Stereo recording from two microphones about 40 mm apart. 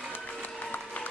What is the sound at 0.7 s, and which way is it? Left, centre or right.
Applause, left.